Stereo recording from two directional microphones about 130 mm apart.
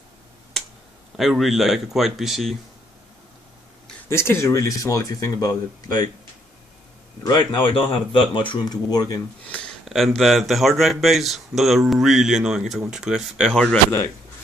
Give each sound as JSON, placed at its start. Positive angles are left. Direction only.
{"t": 1.1, "sound": "speech", "side_deg": 0}
{"t": 4.1, "sound": "speech", "side_deg": 20}
{"t": 7.2, "sound": "speech", "side_deg": 35}
{"t": 9.8, "sound": "speech", "side_deg": 0}